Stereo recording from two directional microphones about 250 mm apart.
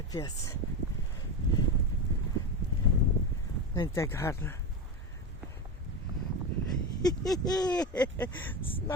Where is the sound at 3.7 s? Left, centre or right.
Centre.